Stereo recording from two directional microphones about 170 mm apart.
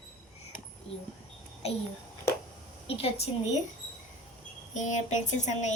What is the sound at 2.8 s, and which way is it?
Speech, 35° left (ahead or behind).